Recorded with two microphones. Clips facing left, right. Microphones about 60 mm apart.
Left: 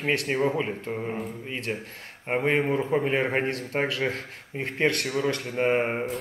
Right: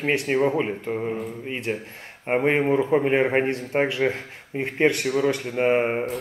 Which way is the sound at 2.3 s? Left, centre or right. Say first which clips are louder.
Right 4 dB; centre.